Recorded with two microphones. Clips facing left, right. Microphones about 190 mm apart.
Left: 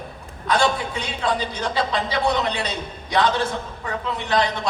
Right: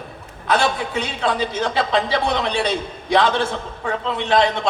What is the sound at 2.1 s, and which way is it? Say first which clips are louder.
A man's voice: right 1 dB; 30° right (ahead or behind).